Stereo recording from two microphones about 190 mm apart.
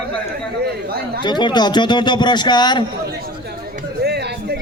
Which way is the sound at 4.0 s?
60° right (ahead or behind).